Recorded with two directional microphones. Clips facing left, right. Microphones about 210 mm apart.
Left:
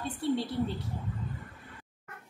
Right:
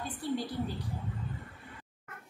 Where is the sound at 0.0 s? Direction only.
25° left (ahead or behind).